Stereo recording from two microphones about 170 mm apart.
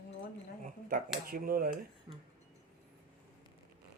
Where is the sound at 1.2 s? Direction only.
60° right (ahead or behind).